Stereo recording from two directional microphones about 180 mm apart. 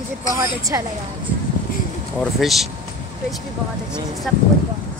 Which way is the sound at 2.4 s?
Centre (ahead or behind).